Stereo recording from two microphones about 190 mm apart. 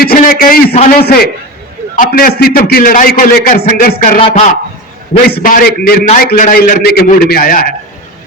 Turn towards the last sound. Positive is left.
turn(degrees=50)  # may be behind; listen again after turning